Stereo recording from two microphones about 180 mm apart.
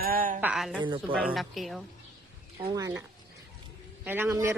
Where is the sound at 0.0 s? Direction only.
50° right (ahead or behind).